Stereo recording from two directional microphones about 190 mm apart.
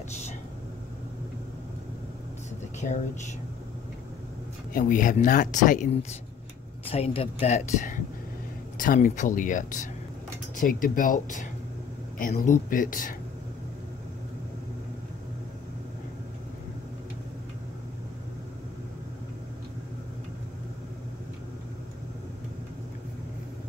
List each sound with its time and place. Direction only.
2.8 s speech: 35° left (ahead or behind)
4.7 s speech: 45° left (ahead or behind)
6.9 s speech: 30° left (ahead or behind)